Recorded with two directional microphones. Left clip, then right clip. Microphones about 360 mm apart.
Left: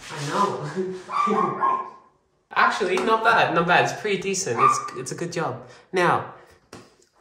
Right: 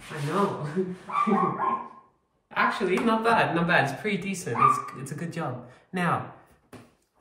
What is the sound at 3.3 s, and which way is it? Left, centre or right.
Speech, centre.